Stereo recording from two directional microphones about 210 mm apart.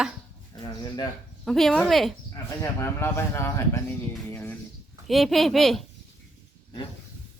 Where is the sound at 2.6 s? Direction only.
10° left (ahead or behind).